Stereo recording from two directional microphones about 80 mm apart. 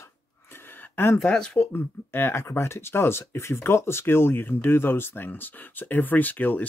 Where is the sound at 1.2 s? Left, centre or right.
Centre.